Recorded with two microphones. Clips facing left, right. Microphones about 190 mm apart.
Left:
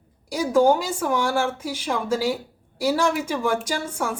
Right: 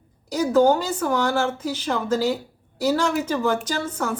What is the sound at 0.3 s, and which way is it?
Speech, 10° left (ahead or behind).